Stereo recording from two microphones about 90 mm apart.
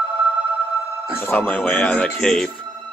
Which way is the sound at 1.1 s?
20° left (ahead or behind).